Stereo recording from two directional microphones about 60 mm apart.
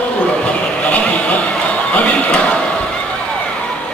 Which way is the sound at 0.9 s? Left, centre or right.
Left.